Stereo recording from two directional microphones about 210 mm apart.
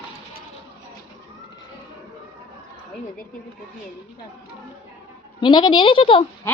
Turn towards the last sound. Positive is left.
turn(degrees=25)  # may be behind; listen again after turning